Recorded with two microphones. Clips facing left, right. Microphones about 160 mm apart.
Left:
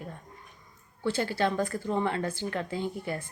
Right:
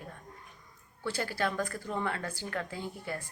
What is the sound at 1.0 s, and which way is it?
A woman's voice, 25° left (ahead or behind).